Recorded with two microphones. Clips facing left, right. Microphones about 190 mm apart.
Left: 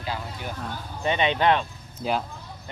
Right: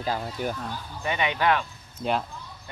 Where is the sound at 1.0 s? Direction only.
25° left (ahead or behind).